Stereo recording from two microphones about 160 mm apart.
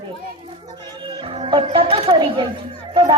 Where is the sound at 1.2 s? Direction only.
35° right (ahead or behind).